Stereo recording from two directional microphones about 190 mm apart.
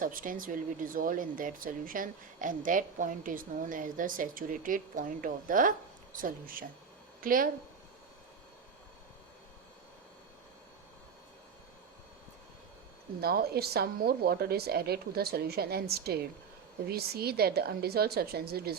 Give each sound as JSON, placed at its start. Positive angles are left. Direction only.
{"t": 0.0, "sound": "speech", "side_deg": -45}
{"t": 13.2, "sound": "a woman's voice", "side_deg": -55}